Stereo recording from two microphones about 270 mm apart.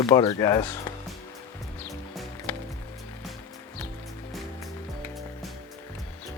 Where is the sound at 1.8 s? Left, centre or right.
Centre.